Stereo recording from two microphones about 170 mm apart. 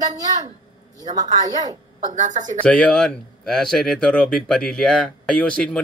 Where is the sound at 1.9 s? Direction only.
45° right (ahead or behind).